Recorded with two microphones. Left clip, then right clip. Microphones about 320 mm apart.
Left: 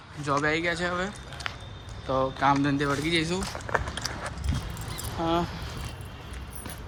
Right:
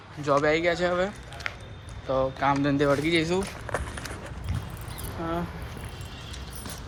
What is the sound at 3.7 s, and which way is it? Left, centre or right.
Clip-clop, right.